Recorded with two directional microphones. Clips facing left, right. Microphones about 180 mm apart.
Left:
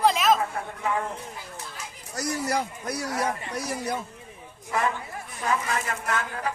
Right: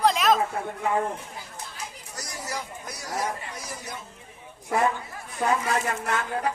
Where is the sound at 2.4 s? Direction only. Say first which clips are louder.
Left 7 dB; 65° left (ahead or behind).